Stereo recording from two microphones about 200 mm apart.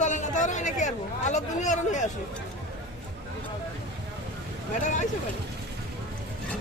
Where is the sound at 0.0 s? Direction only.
40° left (ahead or behind).